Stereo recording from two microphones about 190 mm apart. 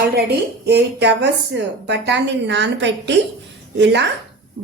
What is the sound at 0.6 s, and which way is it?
A woman's voice, 65° right (ahead or behind).